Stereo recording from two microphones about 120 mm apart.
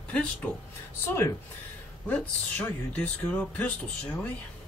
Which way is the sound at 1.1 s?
20° left (ahead or behind).